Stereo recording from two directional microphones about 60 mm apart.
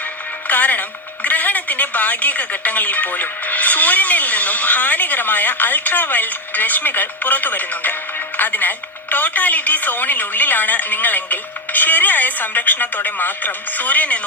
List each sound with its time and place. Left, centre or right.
0.4 s a woman's voice: left